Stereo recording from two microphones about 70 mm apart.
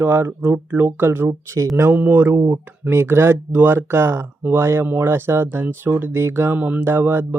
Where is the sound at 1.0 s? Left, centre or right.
Right.